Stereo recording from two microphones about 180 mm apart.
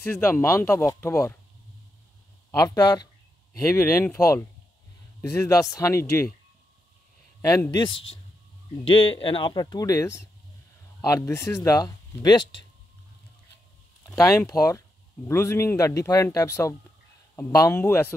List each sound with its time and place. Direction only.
0.0 s speech: 15° left (ahead or behind)
2.6 s speech: 20° left (ahead or behind)
7.4 s speech: 20° left (ahead or behind)
14.0 s speech: 15° left (ahead or behind)